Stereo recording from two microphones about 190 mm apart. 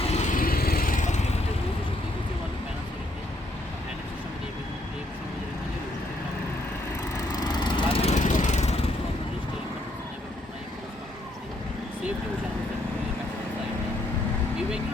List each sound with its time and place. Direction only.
0.1 s vehicle: 40° left (ahead or behind)
7.1 s lawn mower: 20° left (ahead or behind)
8.1 s vehicle: 40° left (ahead or behind)